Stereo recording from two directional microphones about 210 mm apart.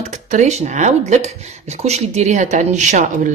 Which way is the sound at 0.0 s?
35° right (ahead or behind).